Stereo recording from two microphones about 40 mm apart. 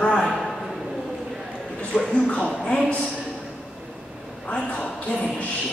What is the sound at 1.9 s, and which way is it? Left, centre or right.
Speech, centre.